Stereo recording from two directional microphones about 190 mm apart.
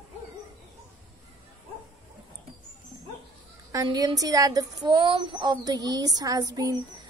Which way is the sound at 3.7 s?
20° right (ahead or behind).